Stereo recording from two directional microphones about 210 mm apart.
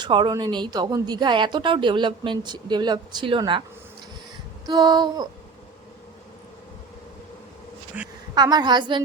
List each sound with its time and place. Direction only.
0.0 s speech: 20° right (ahead or behind)
4.6 s speech: 20° right (ahead or behind)
7.9 s a woman's voice: 5° right (ahead or behind)
8.4 s speech: 20° right (ahead or behind)